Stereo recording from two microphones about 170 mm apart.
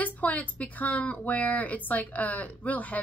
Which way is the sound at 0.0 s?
10° left (ahead or behind).